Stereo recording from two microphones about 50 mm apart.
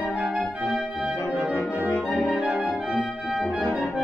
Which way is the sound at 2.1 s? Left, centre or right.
Left.